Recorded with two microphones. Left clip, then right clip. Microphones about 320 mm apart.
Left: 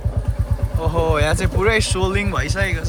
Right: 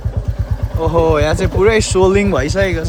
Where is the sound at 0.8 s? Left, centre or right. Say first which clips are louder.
Right 6 dB; centre.